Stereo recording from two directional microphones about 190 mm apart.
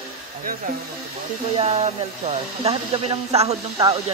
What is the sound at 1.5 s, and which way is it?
Speech, 35° right (ahead or behind).